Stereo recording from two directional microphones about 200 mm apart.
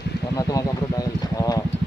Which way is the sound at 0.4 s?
15° left (ahead or behind).